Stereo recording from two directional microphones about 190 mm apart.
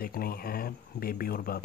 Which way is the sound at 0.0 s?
50° left (ahead or behind).